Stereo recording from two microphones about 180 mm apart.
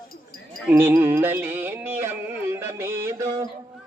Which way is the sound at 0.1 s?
50° left (ahead or behind).